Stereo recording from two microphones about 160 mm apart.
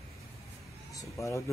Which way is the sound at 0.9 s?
20° left (ahead or behind).